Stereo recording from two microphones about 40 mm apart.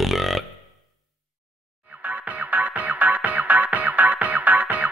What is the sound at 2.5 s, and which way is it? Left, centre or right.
Music, right.